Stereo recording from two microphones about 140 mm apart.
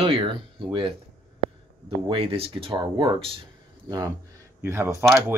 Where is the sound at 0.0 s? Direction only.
40° right (ahead or behind).